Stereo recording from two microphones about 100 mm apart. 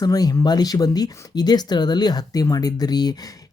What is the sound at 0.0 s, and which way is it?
Speech, 40° left (ahead or behind).